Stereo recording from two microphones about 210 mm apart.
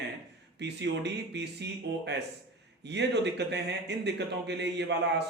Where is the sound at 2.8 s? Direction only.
55° right (ahead or behind).